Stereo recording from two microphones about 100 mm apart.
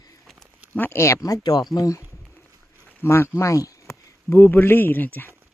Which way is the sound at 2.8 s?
25° left (ahead or behind).